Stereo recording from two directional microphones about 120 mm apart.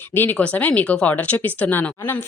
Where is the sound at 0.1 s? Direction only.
15° left (ahead or behind).